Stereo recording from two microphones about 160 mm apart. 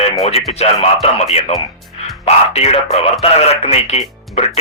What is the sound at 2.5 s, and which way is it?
Speech, 40° left (ahead or behind).